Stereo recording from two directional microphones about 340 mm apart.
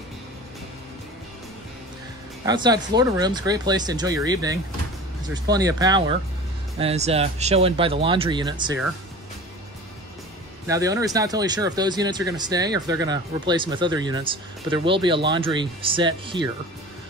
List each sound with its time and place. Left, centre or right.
2.4 s speech: centre
10.7 s speech: centre